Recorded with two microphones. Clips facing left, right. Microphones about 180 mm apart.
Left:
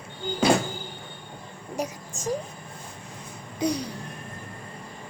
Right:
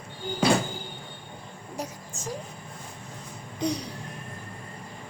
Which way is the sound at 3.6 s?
Centre (ahead or behind).